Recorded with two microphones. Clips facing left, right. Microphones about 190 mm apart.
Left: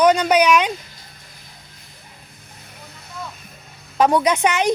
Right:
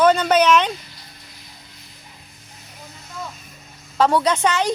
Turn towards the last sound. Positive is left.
turn(degrees=15)  # may be behind; listen again after turning